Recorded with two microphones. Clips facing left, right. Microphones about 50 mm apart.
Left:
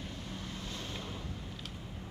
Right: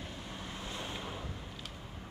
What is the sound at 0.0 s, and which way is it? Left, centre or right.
Vehicle, centre.